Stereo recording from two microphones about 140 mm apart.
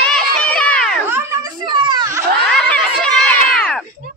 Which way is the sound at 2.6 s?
10° left (ahead or behind).